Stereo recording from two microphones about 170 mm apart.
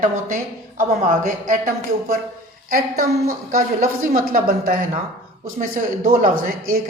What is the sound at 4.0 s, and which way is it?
A man's voice, 50° right (ahead or behind).